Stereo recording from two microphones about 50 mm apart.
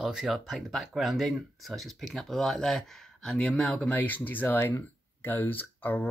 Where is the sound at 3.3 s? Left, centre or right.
Centre.